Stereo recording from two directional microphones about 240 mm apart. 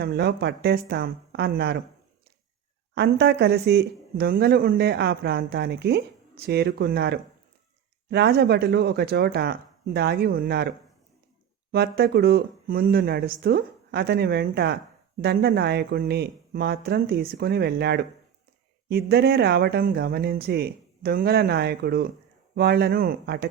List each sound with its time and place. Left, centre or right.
0.0 s speech: right
2.9 s speech: right